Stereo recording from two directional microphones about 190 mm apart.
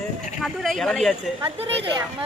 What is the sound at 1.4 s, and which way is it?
Speech, 30° right (ahead or behind).